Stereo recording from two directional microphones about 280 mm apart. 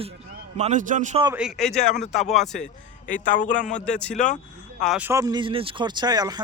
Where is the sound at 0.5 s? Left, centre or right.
Right.